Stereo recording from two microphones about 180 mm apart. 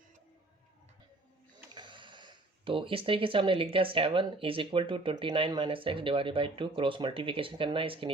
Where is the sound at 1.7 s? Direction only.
25° right (ahead or behind).